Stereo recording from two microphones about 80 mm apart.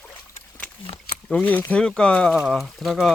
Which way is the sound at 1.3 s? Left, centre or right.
Centre.